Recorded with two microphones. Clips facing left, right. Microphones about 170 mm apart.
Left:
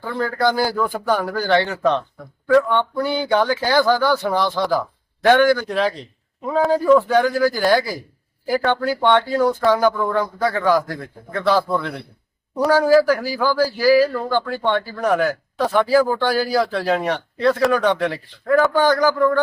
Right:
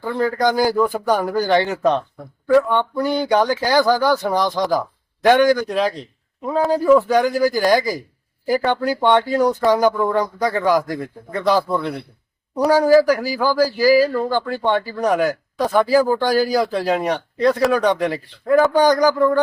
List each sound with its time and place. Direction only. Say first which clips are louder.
0.0 s a man's voice: right 2 dB; 15° right (ahead or behind)